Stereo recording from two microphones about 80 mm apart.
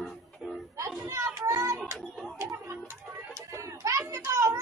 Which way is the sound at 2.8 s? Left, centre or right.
Right.